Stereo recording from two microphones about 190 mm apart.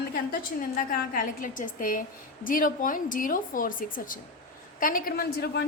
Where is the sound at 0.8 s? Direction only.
45° left (ahead or behind).